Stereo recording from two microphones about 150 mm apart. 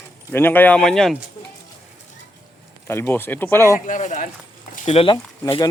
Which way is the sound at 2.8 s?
15° left (ahead or behind).